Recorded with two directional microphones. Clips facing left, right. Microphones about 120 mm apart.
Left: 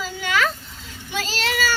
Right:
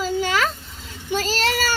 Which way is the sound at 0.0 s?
35° right (ahead or behind).